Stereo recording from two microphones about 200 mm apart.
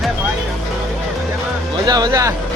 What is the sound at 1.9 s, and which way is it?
Speech, 20° right (ahead or behind).